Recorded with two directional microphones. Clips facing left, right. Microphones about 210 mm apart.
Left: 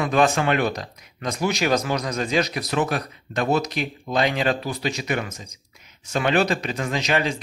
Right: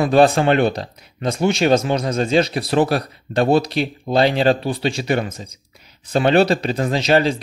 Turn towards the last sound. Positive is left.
turn(degrees=-30)  # may be behind; listen again after turning